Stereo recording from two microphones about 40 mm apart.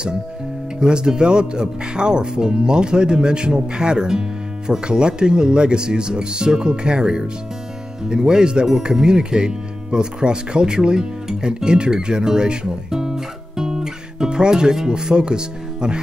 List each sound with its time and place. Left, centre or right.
0.7 s speech: right